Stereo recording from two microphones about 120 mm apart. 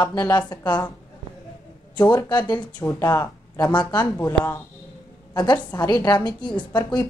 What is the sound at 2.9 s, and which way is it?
Speech, 25° left (ahead or behind).